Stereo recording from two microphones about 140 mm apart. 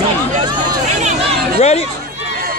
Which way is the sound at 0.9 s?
55° right (ahead or behind).